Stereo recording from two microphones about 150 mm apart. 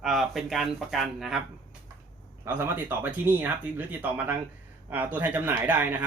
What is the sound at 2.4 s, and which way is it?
A man's voice, 15° right (ahead or behind).